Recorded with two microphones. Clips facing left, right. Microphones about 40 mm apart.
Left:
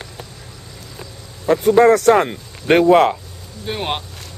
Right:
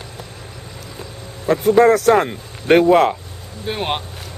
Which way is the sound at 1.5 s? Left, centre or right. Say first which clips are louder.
Left 1 dB; centre.